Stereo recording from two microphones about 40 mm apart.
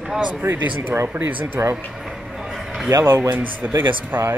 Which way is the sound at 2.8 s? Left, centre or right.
Right.